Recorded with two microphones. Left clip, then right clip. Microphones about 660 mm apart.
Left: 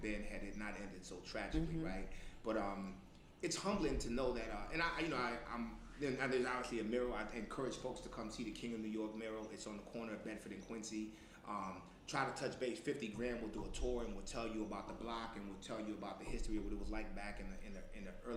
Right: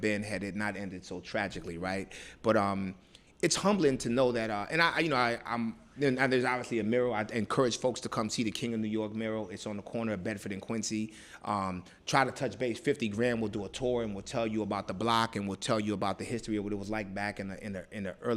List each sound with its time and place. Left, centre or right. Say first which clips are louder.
0.0 s a man's voice: right 13 dB; right